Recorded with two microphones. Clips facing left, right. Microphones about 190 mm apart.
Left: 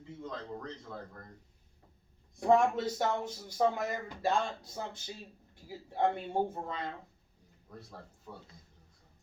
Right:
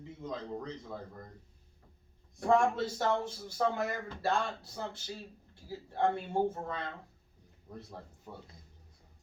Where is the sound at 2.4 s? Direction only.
20° left (ahead or behind).